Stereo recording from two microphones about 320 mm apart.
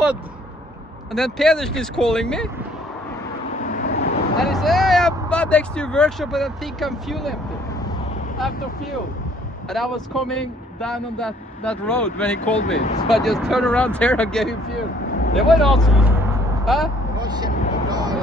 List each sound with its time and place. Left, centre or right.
1.1 s speech: centre
3.6 s vehicle: left
4.4 s speech: centre
8.4 s speech: centre
9.7 s speech: centre
12.5 s speech: left
13.1 s speech: centre
17.4 s speech: centre